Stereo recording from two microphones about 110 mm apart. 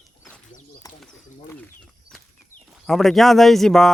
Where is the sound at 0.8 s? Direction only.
35° left (ahead or behind).